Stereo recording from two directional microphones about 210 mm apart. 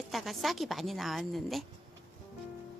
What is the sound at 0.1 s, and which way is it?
A woman's voice, centre (ahead or behind).